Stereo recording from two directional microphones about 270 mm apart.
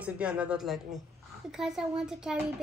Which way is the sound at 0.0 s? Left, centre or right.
Centre.